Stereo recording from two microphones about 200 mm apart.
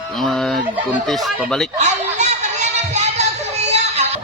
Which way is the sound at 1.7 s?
35° right (ahead or behind).